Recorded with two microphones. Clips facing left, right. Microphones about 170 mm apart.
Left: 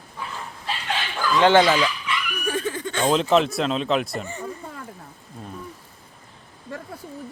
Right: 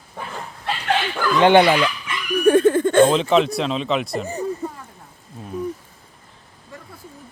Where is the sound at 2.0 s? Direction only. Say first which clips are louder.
Right 11 dB; 55° right (ahead or behind).